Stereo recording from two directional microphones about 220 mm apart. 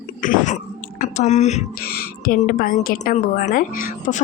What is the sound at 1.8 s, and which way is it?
A woman's voice, 45° left (ahead or behind).